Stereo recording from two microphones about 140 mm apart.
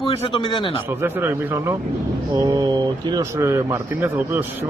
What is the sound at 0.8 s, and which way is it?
A man's voice, 15° right (ahead or behind).